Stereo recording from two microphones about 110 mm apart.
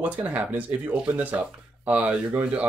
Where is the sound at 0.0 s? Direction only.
15° right (ahead or behind).